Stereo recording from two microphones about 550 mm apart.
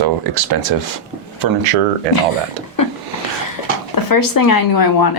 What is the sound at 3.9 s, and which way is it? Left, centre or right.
Speech, left.